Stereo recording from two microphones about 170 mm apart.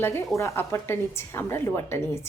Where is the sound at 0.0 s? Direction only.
15° left (ahead or behind).